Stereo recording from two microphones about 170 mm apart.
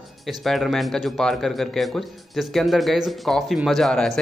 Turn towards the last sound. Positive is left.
turn(degrees=5)  # may be behind; listen again after turning